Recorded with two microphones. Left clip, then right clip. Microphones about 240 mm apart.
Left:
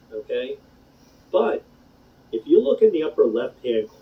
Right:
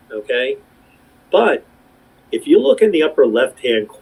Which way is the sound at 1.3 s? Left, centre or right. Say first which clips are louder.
Right 7 dB; right.